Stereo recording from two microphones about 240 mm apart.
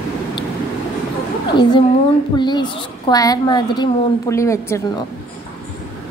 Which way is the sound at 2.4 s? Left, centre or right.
Centre.